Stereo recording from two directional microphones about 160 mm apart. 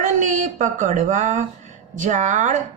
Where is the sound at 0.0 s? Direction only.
50° right (ahead or behind).